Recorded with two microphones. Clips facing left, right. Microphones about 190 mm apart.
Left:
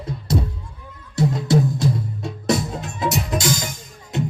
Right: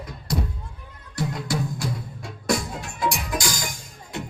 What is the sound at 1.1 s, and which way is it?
Music, 25° left (ahead or behind).